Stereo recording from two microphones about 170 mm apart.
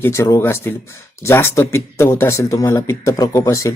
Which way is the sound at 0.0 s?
15° left (ahead or behind).